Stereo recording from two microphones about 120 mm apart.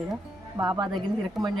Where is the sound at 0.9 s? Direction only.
Centre (ahead or behind).